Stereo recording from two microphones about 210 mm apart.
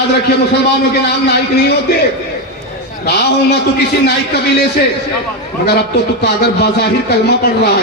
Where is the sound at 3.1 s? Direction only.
50° left (ahead or behind).